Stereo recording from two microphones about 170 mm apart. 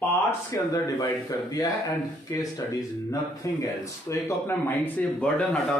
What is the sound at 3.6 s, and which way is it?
Speech, 15° left (ahead or behind).